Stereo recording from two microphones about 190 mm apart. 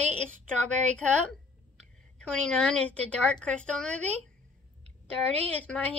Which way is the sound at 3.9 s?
35° right (ahead or behind).